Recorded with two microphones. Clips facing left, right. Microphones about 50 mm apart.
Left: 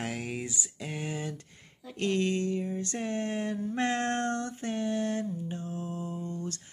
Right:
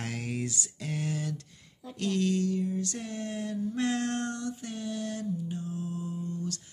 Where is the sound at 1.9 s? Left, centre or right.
Left.